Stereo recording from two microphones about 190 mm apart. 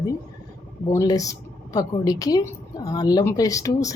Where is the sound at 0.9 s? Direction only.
15° left (ahead or behind).